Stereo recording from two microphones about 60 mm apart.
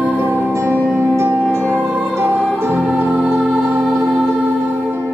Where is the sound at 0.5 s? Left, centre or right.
Right.